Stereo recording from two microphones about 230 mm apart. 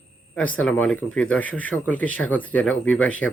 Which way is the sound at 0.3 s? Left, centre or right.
Centre.